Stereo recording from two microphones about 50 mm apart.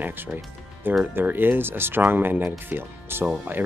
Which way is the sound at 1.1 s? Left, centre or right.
Right.